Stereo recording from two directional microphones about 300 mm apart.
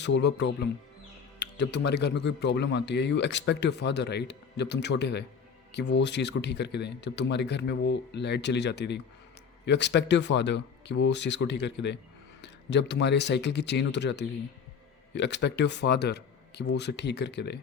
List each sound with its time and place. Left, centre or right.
0.0 s speech: left